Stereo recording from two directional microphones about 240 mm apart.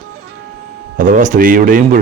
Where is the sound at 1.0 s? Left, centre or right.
Right.